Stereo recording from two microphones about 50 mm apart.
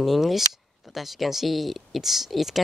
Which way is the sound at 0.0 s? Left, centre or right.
Centre.